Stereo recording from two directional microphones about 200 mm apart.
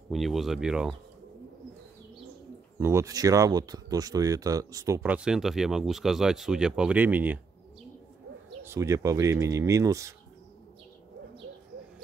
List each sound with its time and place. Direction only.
0.1 s speech: centre (ahead or behind)
2.8 s speech: 15° right (ahead or behind)
8.6 s speech: 15° right (ahead or behind)